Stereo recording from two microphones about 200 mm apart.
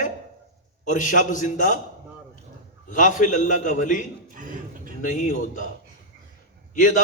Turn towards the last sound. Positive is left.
turn(degrees=40)  # may be behind; listen again after turning